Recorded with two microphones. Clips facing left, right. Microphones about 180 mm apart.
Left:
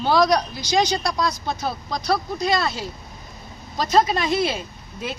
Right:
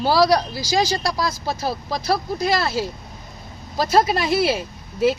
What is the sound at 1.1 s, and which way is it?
Speech, 5° right (ahead or behind).